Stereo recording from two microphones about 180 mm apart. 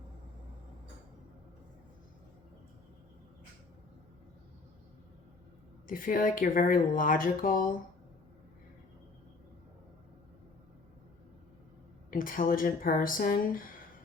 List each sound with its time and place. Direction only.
5.9 s speech: 50° left (ahead or behind)
12.1 s speech: 50° left (ahead or behind)